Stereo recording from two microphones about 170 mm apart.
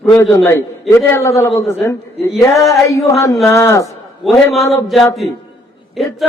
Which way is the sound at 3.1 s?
20° left (ahead or behind).